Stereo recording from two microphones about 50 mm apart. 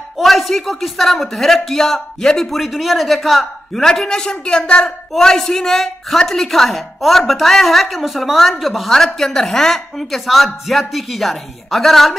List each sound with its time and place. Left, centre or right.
0.2 s a woman's voice: centre
3.8 s a man's voice: centre